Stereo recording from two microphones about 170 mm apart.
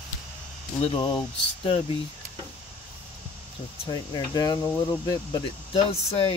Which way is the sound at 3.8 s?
25° left (ahead or behind).